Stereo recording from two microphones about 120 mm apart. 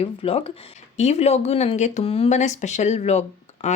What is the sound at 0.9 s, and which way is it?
Speech, 65° left (ahead or behind).